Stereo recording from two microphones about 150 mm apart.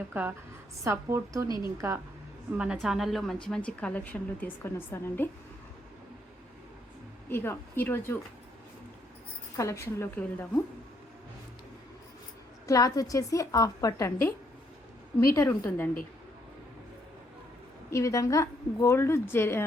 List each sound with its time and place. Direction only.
0.1 s a woman's voice: 10° right (ahead or behind)
1.5 s a woman's voice: 30° left (ahead or behind)
2.5 s a woman's voice: 5° right (ahead or behind); by 5.3 s 15° left (ahead or behind)
7.3 s a woman's voice: 15° left (ahead or behind)
9.6 s a woman's voice: 20° left (ahead or behind)
12.6 s a woman's voice: 25° left (ahead or behind)
17.9 s a woman's voice: 20° left (ahead or behind)